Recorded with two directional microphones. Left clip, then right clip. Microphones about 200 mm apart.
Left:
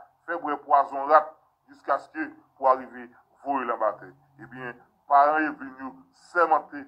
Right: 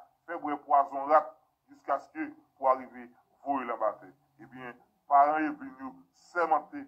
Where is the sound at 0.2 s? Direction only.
35° left (ahead or behind).